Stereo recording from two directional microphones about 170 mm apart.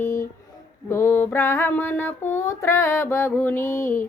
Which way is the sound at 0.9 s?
15° left (ahead or behind).